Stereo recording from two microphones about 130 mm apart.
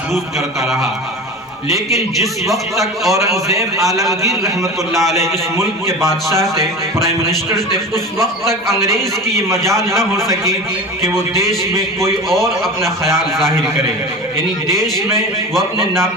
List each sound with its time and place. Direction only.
2.2 s a man's voice: centre (ahead or behind)
3.1 s a man's voice: 25° right (ahead or behind)
12.6 s a man's voice: centre (ahead or behind)
15.5 s a man's voice: centre (ahead or behind)